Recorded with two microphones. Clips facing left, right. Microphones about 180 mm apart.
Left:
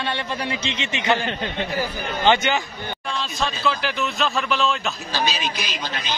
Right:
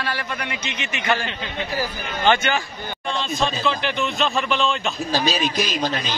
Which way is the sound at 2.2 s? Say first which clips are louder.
Even; 20° left (ahead or behind).